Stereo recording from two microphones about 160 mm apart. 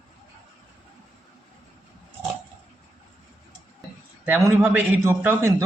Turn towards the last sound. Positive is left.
turn(degrees=-15)  # may be behind; listen again after turning